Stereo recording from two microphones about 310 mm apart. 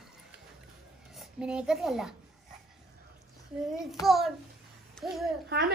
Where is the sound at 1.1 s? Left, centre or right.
Centre.